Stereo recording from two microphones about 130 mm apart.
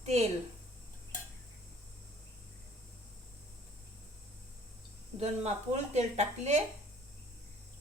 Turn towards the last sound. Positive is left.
turn(degrees=-60)  # may be behind; listen again after turning